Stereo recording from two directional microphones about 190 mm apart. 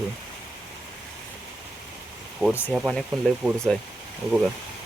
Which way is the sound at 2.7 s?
Centre (ahead or behind).